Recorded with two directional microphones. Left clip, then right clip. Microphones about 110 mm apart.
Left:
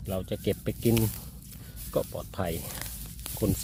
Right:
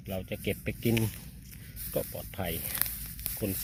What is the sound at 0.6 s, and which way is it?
Speech, 25° left (ahead or behind).